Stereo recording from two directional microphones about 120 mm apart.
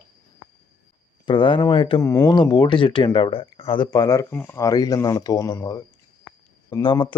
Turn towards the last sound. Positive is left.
turn(degrees=45)  # may be behind; listen again after turning